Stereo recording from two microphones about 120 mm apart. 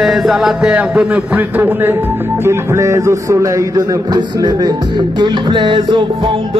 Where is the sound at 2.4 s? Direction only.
20° right (ahead or behind).